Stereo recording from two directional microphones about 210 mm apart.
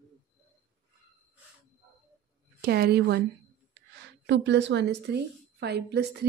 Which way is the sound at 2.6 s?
50° right (ahead or behind).